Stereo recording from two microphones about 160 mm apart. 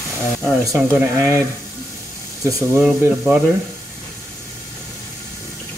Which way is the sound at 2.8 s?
10° right (ahead or behind).